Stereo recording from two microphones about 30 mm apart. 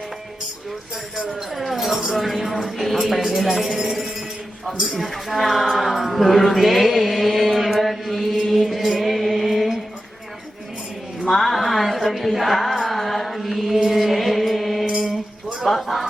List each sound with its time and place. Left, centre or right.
1.5 s a sound: centre
2.1 s a man's voice: centre
5.0 s speech: centre
11.3 s music: centre
12.9 s mantra: centre
15.6 s speech: centre